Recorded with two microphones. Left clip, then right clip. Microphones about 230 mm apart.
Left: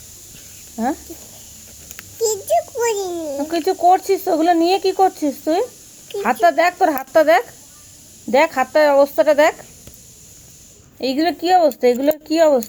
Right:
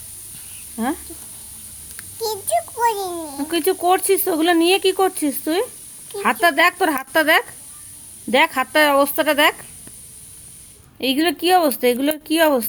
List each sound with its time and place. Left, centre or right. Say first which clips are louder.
2.2 s a sound: left 4 dB; right
3.8 s speech: left 5 dB; right
10.9 s speech: even; right